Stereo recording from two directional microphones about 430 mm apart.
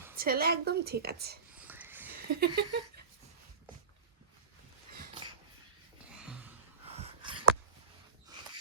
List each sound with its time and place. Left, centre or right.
0.2 s a woman's voice: right
1.5 s wheeze: centre
2.1 s a sound: right
2.5 s a woman's voice: right
6.1 s gasp: centre
6.8 s a sound: centre